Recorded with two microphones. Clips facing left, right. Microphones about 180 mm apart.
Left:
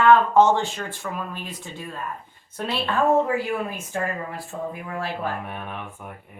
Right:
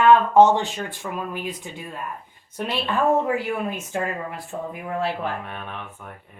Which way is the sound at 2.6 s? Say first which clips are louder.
Even; 15° right (ahead or behind).